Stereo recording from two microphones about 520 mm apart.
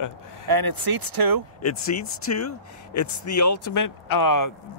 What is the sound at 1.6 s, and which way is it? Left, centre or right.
Speech, left.